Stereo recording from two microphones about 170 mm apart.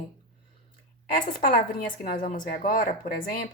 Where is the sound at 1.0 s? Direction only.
50° left (ahead or behind).